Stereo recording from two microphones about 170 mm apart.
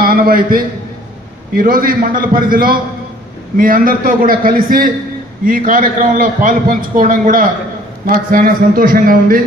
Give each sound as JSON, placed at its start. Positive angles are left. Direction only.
{"t": 0.0, "sound": "a man's voice", "side_deg": -60}